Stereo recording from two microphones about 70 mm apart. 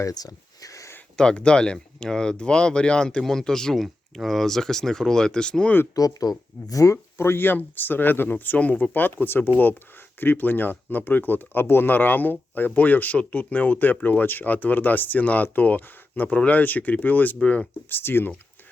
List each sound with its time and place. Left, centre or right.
0.1 s a sound: left
1.1 s speech: centre
5.9 s speech: left
7.2 s speech: left
17.8 s speech: left